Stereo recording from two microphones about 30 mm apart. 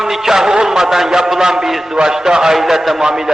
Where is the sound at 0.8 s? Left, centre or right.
Centre.